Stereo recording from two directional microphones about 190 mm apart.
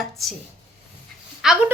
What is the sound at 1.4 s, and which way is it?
Speech, 5° right (ahead or behind).